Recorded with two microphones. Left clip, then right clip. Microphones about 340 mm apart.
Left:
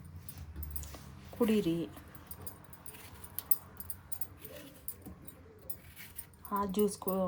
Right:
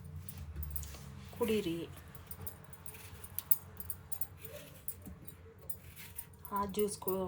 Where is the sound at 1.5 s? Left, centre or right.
Left.